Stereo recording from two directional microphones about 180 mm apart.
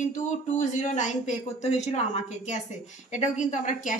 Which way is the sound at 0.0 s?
45° left (ahead or behind).